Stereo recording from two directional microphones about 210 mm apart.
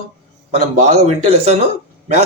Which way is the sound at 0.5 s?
30° right (ahead or behind).